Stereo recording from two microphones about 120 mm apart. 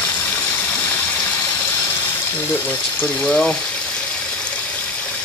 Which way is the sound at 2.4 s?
15° left (ahead or behind).